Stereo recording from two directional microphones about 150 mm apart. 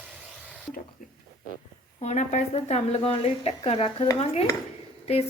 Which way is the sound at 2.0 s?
50° left (ahead or behind).